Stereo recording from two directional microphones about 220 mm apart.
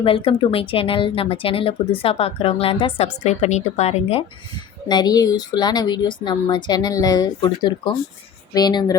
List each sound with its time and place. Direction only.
0.0 s a woman's voice: 25° left (ahead or behind)
4.9 s a woman's voice: 20° left (ahead or behind)